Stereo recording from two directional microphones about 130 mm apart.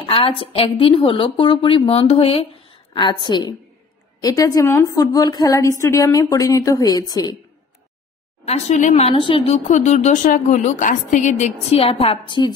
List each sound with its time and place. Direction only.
0.0 s a woman's voice: 45° left (ahead or behind)
2.9 s a woman's voice: 35° left (ahead or behind)
8.5 s a woman's voice: 65° left (ahead or behind); by 9.6 s 40° left (ahead or behind)
9.7 s a woman's voice: 65° left (ahead or behind)
11.8 s a woman's voice: 50° left (ahead or behind)